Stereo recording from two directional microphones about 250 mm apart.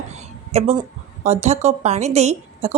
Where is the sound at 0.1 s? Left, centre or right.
Right.